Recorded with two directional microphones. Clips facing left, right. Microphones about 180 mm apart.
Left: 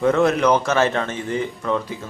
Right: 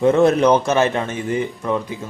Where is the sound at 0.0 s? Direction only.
25° right (ahead or behind).